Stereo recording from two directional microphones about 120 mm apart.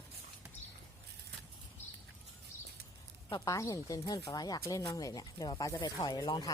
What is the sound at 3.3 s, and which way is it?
Speech, 30° left (ahead or behind).